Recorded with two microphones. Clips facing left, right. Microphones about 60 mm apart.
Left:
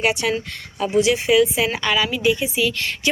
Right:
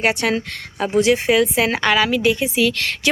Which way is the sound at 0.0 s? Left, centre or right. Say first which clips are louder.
Right 2 dB; right.